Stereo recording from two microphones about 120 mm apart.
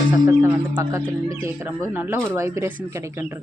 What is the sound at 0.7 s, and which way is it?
Speech, 25° right (ahead or behind).